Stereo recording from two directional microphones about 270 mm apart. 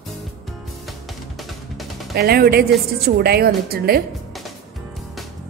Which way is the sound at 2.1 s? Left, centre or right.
Right.